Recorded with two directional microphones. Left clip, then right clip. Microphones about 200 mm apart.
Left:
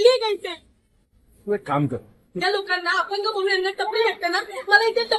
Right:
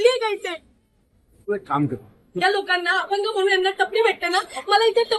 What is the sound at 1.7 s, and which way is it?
Speech, 45° left (ahead or behind).